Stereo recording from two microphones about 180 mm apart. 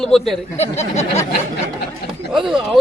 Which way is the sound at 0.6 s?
35° left (ahead or behind).